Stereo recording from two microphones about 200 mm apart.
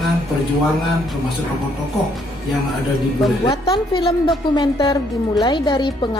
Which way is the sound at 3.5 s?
20° left (ahead or behind).